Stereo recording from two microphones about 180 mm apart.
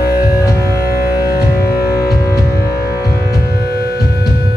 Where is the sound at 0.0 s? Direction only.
60° left (ahead or behind).